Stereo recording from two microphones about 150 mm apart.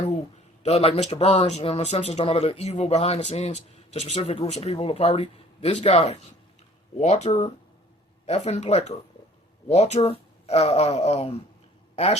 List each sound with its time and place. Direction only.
0.6 s a woman's voice: 40° left (ahead or behind)